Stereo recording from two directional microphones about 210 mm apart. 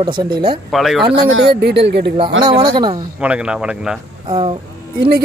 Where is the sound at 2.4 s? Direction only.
20° right (ahead or behind).